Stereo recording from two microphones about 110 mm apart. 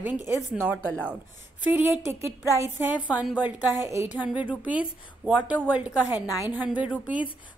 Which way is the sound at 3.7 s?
25° right (ahead or behind).